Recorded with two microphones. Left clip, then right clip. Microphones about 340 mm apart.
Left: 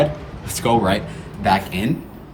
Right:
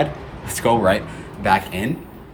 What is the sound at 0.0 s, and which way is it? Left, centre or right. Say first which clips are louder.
A man's voice: left 3 dB; centre.